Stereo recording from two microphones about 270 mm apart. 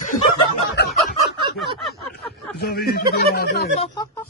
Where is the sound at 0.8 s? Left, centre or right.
Left.